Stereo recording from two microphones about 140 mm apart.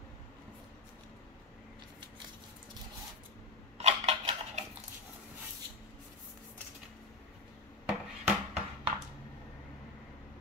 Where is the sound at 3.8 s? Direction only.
50° right (ahead or behind).